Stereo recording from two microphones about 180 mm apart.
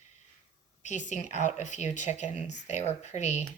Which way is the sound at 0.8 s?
40° left (ahead or behind).